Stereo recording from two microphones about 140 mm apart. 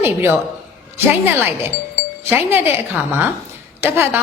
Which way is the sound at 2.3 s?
15° right (ahead or behind).